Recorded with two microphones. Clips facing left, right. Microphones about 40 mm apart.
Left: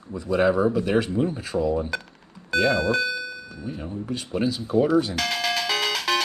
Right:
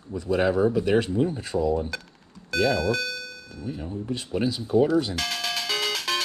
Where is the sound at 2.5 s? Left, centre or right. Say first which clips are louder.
Left 2 dB; left.